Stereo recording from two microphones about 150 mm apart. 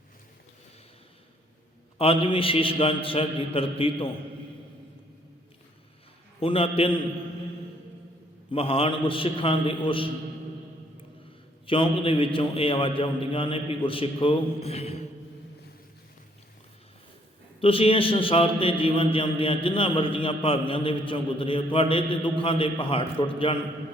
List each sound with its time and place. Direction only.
2.0 s a man's voice: 35° left (ahead or behind)
6.4 s a man's voice: 40° left (ahead or behind)
8.5 s a man's voice: 40° left (ahead or behind)
11.6 s a man's voice: 35° left (ahead or behind)
17.6 s a man's voice: 40° left (ahead or behind)